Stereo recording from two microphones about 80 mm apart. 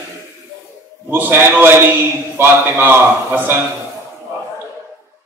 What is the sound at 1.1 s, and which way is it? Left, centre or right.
A man's voice, right.